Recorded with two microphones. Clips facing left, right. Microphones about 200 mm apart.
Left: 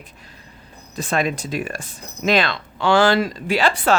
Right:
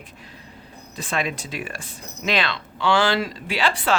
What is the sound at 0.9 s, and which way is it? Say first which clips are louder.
Speech: left 5 dB; 45° left (ahead or behind).